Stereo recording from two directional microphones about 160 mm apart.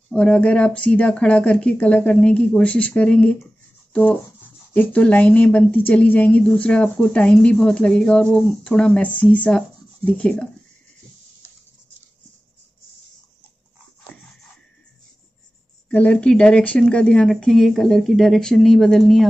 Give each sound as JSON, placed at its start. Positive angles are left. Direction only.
{"t": 0.1, "sound": "a woman's voice", "side_deg": 5}
{"t": 15.9, "sound": "speech", "side_deg": 10}